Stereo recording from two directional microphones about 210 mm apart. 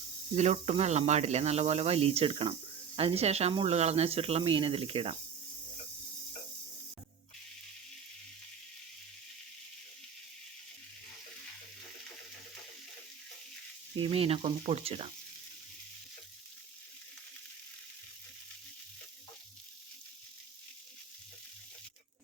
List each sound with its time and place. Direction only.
0.3 s speech: 30° right (ahead or behind)
13.9 s speech: 25° right (ahead or behind)